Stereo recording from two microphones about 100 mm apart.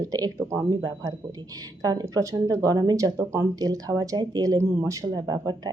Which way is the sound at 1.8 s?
40° right (ahead or behind).